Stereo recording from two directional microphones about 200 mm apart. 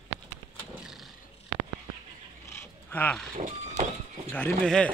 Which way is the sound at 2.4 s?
15° left (ahead or behind).